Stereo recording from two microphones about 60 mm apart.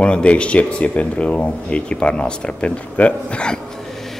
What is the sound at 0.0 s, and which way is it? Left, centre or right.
Speech, centre.